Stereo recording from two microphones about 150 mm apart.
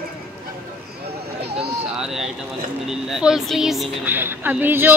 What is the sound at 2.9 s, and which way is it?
Speech, 5° right (ahead or behind).